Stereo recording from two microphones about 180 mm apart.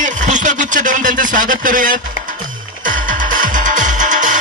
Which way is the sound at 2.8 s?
50° right (ahead or behind).